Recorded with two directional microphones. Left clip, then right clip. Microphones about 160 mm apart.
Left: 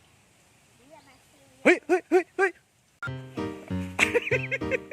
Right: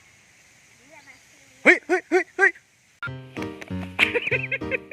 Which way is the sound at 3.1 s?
Centre (ahead or behind).